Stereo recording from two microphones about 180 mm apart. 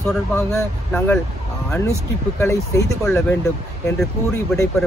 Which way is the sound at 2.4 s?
15° left (ahead or behind).